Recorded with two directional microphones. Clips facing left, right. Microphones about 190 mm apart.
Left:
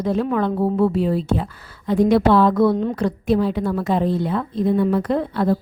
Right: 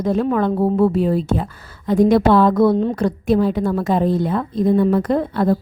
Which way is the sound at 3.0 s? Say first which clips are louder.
Right 2 dB; 45° right (ahead or behind).